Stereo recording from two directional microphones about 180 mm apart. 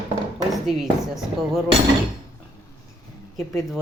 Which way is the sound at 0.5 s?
Centre (ahead or behind).